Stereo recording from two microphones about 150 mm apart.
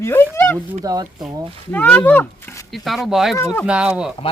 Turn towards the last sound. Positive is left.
turn(degrees=-5)  # may be behind; listen again after turning